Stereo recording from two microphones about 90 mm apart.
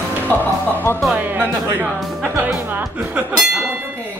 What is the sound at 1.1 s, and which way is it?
Speech, 20° right (ahead or behind).